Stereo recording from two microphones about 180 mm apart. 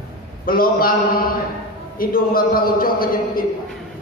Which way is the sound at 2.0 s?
55° left (ahead or behind).